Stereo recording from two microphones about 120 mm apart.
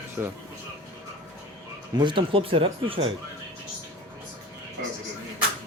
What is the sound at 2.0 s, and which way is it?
Speech, 45° right (ahead or behind).